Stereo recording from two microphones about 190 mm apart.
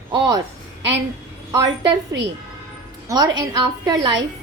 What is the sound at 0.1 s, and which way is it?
Speech, 20° right (ahead or behind).